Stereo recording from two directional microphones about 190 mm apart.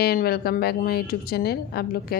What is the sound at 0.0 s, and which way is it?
A woman's voice, 55° left (ahead or behind).